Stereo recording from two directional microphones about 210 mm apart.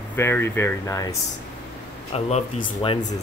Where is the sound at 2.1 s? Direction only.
30° left (ahead or behind).